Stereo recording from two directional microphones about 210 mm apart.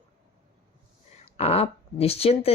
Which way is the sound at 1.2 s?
30° left (ahead or behind).